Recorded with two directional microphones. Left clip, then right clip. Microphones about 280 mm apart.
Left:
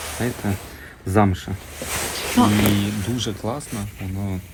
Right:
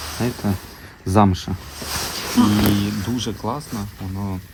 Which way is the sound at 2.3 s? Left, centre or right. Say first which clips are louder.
Even; centre.